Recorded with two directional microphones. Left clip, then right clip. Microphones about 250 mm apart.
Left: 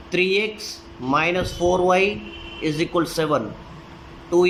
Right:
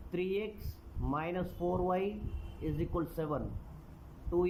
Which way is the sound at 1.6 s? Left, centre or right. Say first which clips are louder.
Left 15 dB; left.